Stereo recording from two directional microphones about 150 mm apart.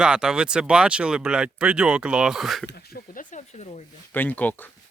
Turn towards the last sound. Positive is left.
turn(degrees=10)  # may be behind; listen again after turning